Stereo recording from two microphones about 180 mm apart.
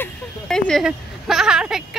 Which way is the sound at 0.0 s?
5° left (ahead or behind).